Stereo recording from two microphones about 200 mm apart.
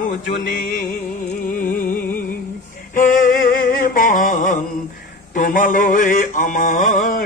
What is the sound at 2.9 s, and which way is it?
Music, 45° left (ahead or behind).